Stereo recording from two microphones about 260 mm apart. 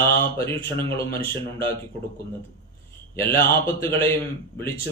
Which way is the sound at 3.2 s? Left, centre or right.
Centre.